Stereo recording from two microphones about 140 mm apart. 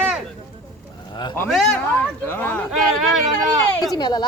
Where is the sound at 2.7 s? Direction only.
Centre (ahead or behind).